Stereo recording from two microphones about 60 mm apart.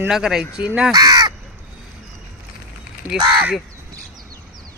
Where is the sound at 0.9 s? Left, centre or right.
Right.